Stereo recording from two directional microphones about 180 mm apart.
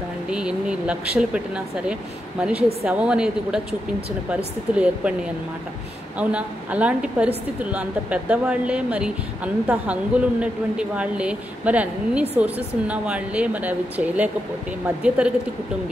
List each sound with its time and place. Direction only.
0.3 s a woman's voice: 5° right (ahead or behind)
4.7 s a woman's voice: 5° right (ahead or behind)